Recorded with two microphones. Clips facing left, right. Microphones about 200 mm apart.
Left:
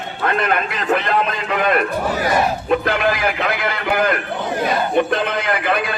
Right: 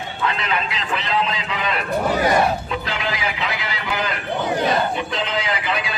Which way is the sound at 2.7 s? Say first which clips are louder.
Left 8 dB; 55° left (ahead or behind).